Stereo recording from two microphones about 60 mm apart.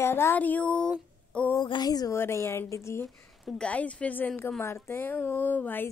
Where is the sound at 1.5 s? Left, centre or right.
Left.